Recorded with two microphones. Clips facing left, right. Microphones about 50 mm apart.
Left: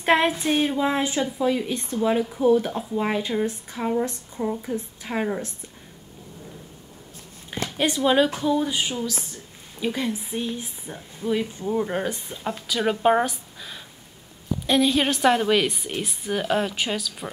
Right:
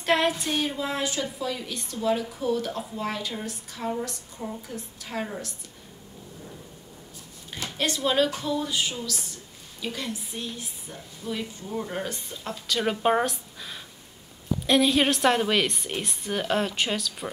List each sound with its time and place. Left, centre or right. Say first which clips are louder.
0.0 s a woman's voice: left 4 dB; left
7.7 s a woman's voice: left 5 dB; centre
12.6 s a woman's voice: left 3 dB; centre